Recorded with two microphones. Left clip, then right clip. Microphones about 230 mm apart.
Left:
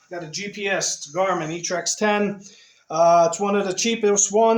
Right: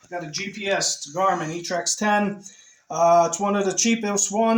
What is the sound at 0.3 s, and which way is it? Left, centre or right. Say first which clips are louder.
Speech: left 1 dB; left.